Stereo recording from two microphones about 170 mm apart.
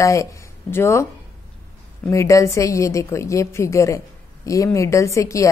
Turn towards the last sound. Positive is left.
turn(degrees=20)  # may be behind; listen again after turning